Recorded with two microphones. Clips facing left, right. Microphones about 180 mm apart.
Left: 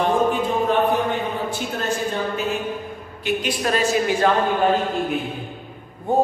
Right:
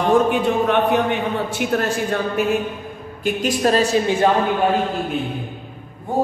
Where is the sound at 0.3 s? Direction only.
75° right (ahead or behind).